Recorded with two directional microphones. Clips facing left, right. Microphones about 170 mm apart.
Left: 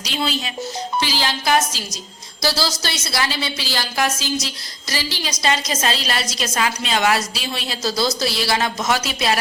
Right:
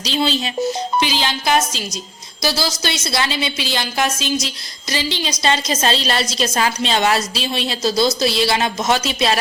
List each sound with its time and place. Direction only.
0.0 s a woman's voice: 25° right (ahead or behind)